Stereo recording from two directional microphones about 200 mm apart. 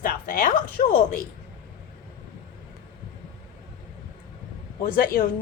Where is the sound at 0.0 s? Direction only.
45° left (ahead or behind).